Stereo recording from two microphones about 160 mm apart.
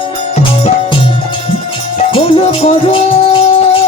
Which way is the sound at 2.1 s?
35° left (ahead or behind).